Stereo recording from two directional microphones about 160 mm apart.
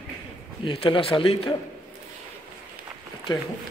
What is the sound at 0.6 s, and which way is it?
Speech, 35° left (ahead or behind).